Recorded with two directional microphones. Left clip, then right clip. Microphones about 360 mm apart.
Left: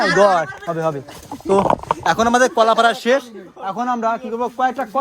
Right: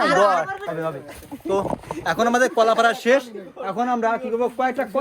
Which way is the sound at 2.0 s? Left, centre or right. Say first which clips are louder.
Left 4 dB; centre.